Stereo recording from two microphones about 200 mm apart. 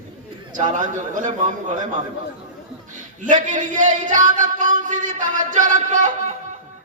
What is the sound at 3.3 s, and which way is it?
Music, 40° right (ahead or behind).